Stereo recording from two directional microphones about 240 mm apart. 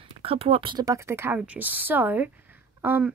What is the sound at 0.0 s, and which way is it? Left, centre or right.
A woman's voice, right.